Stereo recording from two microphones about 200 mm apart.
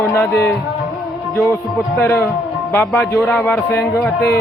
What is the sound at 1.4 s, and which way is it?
A man's voice, 10° left (ahead or behind).